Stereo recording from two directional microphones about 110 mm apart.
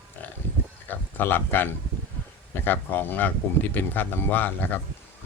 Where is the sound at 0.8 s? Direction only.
20° left (ahead or behind).